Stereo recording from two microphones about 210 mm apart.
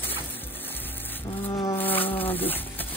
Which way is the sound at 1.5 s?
20° left (ahead or behind).